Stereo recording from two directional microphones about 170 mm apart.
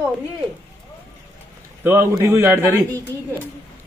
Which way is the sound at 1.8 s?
15° right (ahead or behind).